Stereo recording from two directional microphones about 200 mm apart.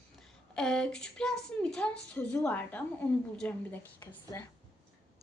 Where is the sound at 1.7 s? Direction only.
5° left (ahead or behind).